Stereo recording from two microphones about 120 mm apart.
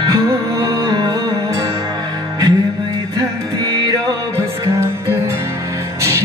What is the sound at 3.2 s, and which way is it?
Music, 35° right (ahead or behind).